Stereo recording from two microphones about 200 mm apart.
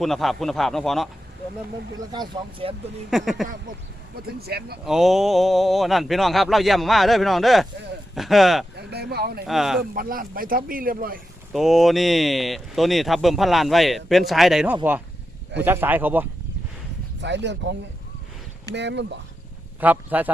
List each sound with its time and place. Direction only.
0.0 s speech: centre (ahead or behind)
2.1 s speech: 25° right (ahead or behind)
3.1 s speech: centre (ahead or behind)
4.4 s a man's voice: 50° right (ahead or behind)
4.9 s speech: centre (ahead or behind)
8.7 s speech: 55° right (ahead or behind)
9.5 s speech: centre (ahead or behind)
9.9 s a man's voice: 45° right (ahead or behind)
11.5 s speech: centre (ahead or behind)
17.2 s speech: 60° right (ahead or behind)
19.8 s speech: 10° right (ahead or behind)